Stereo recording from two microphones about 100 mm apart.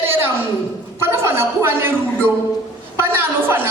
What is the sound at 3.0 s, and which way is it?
Speech, 20° right (ahead or behind).